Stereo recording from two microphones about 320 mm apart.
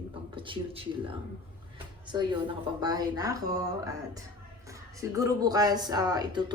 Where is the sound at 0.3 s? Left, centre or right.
Centre.